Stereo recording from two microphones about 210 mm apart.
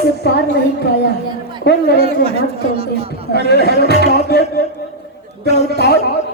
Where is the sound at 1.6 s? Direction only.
50° left (ahead or behind).